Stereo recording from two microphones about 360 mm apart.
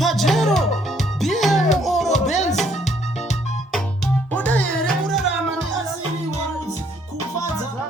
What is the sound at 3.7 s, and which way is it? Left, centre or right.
Music, centre.